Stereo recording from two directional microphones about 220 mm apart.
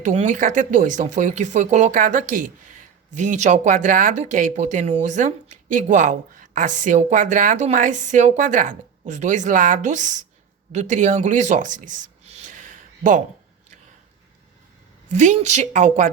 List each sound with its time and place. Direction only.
0.0 s speech: 30° right (ahead or behind)
15.1 s speech: 30° right (ahead or behind)